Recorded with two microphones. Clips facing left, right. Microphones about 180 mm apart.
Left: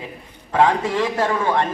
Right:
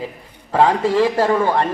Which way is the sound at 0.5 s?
35° right (ahead or behind).